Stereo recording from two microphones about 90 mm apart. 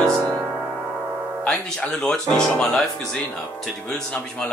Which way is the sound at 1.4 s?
5° left (ahead or behind).